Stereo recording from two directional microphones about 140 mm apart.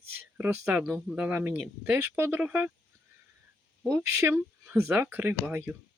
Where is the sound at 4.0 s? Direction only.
15° right (ahead or behind).